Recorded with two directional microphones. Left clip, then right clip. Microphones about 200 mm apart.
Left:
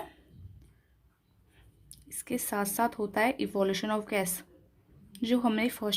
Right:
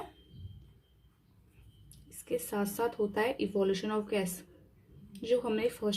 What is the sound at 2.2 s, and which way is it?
Speech, 50° left (ahead or behind).